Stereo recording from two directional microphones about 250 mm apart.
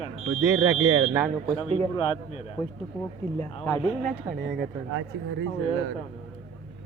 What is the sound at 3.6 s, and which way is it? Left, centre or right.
Speech, centre.